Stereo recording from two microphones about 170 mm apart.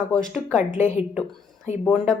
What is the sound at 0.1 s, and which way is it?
Speech, 5° left (ahead or behind).